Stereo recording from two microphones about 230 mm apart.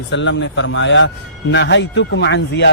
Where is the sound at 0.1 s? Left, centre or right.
Left.